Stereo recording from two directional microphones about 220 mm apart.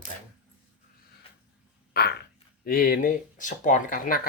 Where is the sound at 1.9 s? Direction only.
45° left (ahead or behind).